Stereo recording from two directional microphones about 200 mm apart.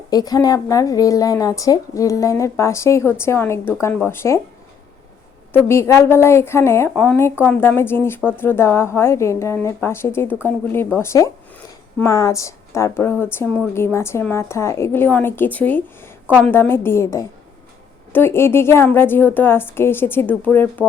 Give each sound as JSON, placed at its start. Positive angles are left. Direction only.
{"t": 0.1, "sound": "a woman's voice", "side_deg": 20}
{"t": 5.5, "sound": "a woman's voice", "side_deg": 15}
{"t": 16.2, "sound": "a woman's voice", "side_deg": -5}
{"t": 16.5, "sound": "a woman's voice", "side_deg": 10}